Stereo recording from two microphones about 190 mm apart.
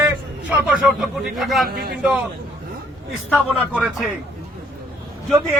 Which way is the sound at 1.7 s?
55° right (ahead or behind).